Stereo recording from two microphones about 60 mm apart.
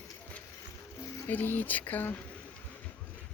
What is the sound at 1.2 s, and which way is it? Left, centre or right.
Speech, left.